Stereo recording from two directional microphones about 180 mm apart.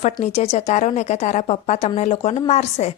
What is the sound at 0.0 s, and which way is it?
A woman's voice, 40° left (ahead or behind).